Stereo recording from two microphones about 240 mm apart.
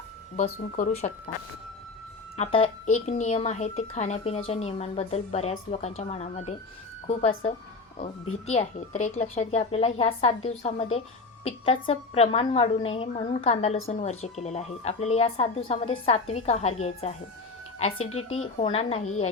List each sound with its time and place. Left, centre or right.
0.8 s speech: left
2.3 s a woman's voice: left
17.9 s speech: left
18.3 s a woman's voice: left